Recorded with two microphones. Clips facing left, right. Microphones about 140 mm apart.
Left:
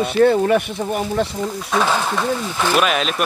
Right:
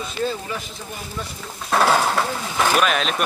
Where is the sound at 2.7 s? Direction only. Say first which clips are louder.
Left 4 dB; 5° left (ahead or behind).